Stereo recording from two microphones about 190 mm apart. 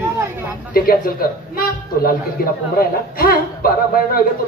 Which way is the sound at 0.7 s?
50° left (ahead or behind).